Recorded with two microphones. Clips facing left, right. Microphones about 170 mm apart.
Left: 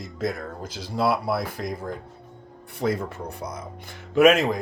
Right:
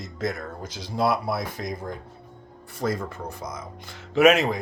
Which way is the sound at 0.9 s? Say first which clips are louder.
Even; 50° right (ahead or behind).